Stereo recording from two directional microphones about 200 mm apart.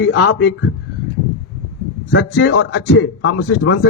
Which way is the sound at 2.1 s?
60° left (ahead or behind).